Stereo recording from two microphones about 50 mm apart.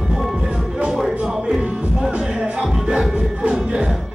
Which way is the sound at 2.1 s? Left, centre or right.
Centre.